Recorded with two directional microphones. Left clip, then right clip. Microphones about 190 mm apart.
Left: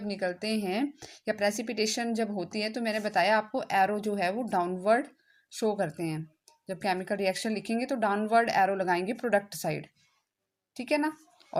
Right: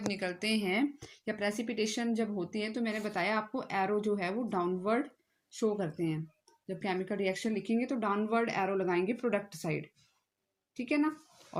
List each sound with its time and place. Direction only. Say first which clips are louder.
0.1 s a woman's voice: left 5 dB; 30° left (ahead or behind)